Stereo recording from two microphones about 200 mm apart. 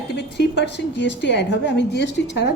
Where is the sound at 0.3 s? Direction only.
60° left (ahead or behind).